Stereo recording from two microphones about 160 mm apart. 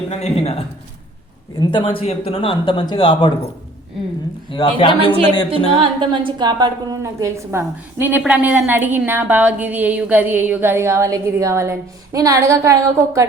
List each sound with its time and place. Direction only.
0.1 s speech: 40° left (ahead or behind)
1.5 s speech: 30° left (ahead or behind)
4.5 s speech: 30° left (ahead or behind)
5.8 s a woman's voice: 30° right (ahead or behind)